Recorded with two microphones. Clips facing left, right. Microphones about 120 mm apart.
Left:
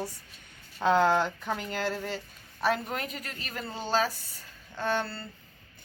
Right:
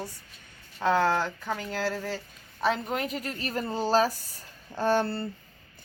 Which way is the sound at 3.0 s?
35° right (ahead or behind).